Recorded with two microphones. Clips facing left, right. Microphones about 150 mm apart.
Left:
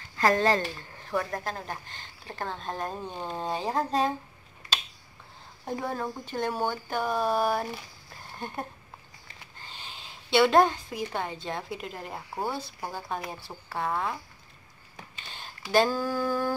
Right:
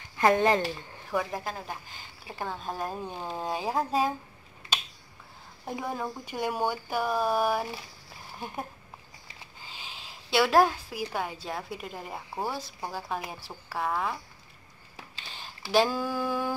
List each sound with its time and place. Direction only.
0.2 s speech: 15° right (ahead or behind)
5.7 s a woman's voice: 5° right (ahead or behind)
15.3 s speech: centre (ahead or behind)